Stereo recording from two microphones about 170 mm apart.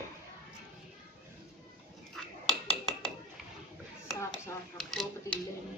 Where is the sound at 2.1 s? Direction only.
Centre (ahead or behind).